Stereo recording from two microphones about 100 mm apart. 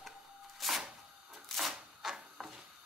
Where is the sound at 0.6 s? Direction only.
Centre (ahead or behind).